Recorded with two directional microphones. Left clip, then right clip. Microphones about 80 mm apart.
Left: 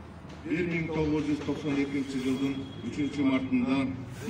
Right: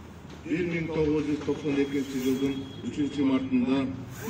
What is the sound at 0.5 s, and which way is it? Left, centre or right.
Speech, left.